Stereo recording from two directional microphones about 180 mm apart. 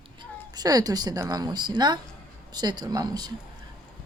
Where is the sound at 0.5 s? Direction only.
20° right (ahead or behind).